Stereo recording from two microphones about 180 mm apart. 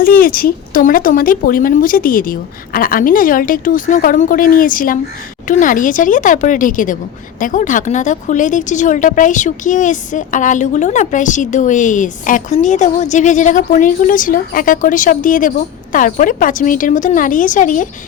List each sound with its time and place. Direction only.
0.0 s a woman's voice: 50° left (ahead or behind)